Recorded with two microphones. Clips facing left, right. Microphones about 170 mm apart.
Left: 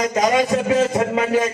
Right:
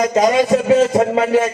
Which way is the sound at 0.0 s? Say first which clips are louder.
Right 4 dB; 30° right (ahead or behind).